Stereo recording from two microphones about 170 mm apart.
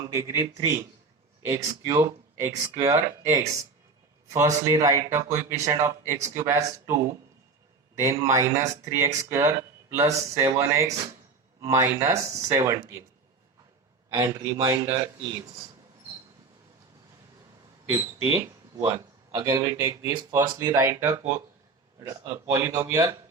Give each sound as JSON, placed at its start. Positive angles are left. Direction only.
{"t": 0.1, "sound": "speech", "side_deg": -20}
{"t": 1.5, "sound": "speech", "side_deg": -20}
{"t": 14.1, "sound": "speech", "side_deg": -25}
{"t": 17.9, "sound": "speech", "side_deg": -15}